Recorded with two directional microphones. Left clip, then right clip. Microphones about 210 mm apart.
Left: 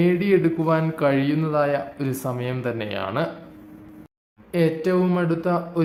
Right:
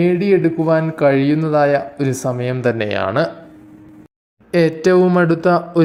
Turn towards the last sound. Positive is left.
turn(degrees=-30)  # may be behind; listen again after turning